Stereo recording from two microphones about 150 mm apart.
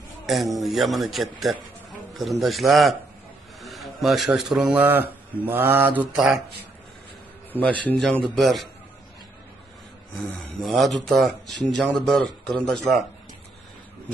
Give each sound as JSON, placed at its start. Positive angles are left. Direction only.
{"t": 0.3, "sound": "speech", "side_deg": 0}
{"t": 6.1, "sound": "speech", "side_deg": 0}
{"t": 7.8, "sound": "speech", "side_deg": 5}
{"t": 10.2, "sound": "speech", "side_deg": 0}